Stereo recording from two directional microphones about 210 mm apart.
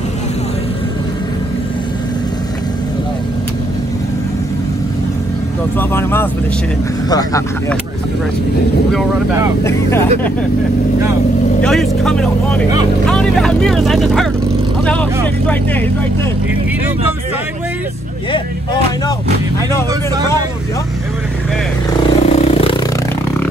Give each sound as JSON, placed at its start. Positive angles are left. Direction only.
{"t": 5.8, "sound": "speech", "side_deg": 10}
{"t": 9.6, "sound": "speech", "side_deg": 10}
{"t": 11.6, "sound": "speech", "side_deg": 0}
{"t": 22.0, "sound": "vehicle", "side_deg": 30}